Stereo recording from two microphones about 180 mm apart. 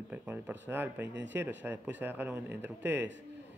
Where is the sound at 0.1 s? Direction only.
10° right (ahead or behind).